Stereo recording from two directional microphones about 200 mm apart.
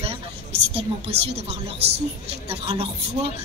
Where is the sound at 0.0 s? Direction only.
30° right (ahead or behind).